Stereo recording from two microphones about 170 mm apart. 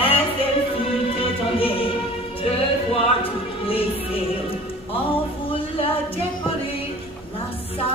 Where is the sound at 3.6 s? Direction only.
35° left (ahead or behind).